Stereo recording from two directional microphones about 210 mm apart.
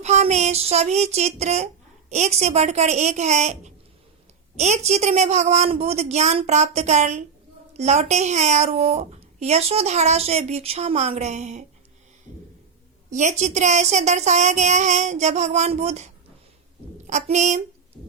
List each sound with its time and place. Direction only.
0.0 s a child's voice: 35° right (ahead or behind)
13.1 s a child's voice: 35° right (ahead or behind)